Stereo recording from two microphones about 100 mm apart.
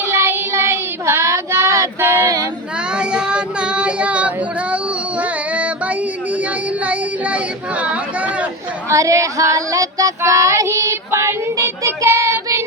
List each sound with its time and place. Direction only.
0.0 s child singing: 25° right (ahead or behind)
2.9 s child singing: 10° right (ahead or behind)
4.7 s a sound: 15° right (ahead or behind)
6.8 s chatter: 15° right (ahead or behind)
8.9 s female singing: 30° right (ahead or behind)